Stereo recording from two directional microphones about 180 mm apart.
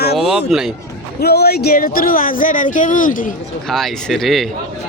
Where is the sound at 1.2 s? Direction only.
65° left (ahead or behind); by 3.3 s 50° left (ahead or behind).